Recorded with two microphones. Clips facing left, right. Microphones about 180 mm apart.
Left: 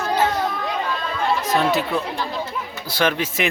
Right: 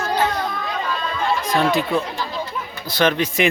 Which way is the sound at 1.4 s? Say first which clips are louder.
Right 2 dB; 5° left (ahead or behind).